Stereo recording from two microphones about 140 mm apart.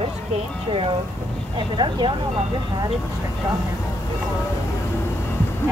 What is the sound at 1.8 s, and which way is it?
Speech, 35° right (ahead or behind).